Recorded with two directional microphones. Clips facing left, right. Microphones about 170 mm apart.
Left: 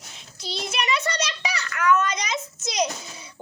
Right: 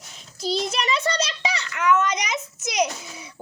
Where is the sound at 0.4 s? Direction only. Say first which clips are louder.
Right 4 dB; 40° right (ahead or behind); by 2.4 s 15° right (ahead or behind).